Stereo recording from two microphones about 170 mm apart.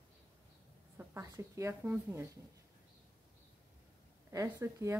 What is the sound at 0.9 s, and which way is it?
Speech, 15° right (ahead or behind).